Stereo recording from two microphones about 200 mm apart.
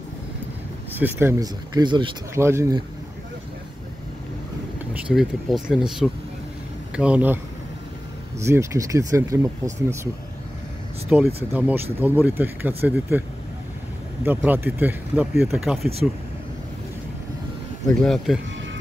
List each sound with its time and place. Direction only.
0.9 s speech: 10° right (ahead or behind)
5.0 s speech: centre (ahead or behind)
8.5 s speech: 15° right (ahead or behind)
11.1 s speech: 5° right (ahead or behind)
14.2 s speech: 10° right (ahead or behind)
18.0 s speech: centre (ahead or behind)